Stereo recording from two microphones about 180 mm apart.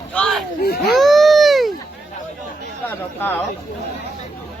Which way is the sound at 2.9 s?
10° left (ahead or behind).